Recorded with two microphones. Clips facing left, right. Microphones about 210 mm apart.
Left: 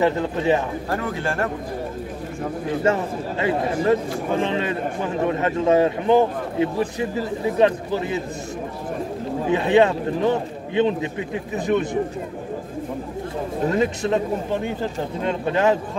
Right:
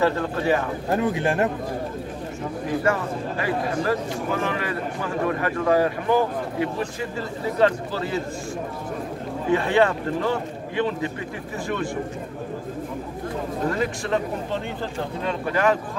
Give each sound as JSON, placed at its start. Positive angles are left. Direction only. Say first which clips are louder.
{"t": 0.0, "sound": "speech", "louder": "left 2 dB", "side_deg": 20}
{"t": 0.8, "sound": "speech", "louder": "right 3 dB", "side_deg": -20}
{"t": 2.8, "sound": "speech", "louder": "left 4 dB", "side_deg": 25}
{"t": 9.5, "sound": "speech", "louder": "left 3 dB", "side_deg": 20}
{"t": 13.7, "sound": "speech", "louder": "left 5 dB", "side_deg": 20}